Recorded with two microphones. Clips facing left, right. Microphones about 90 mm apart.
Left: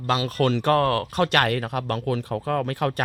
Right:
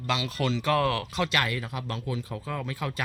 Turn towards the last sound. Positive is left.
turn(degrees=60)  # may be behind; listen again after turning